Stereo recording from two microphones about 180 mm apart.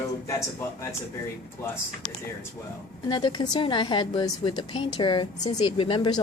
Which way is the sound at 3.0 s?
25° left (ahead or behind).